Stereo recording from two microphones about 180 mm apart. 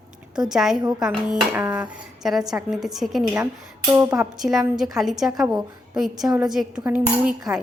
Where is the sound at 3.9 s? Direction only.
15° right (ahead or behind).